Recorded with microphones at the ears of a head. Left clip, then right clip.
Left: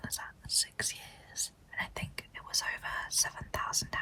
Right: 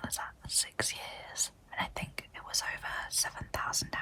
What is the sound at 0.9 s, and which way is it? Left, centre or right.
Whispering, right.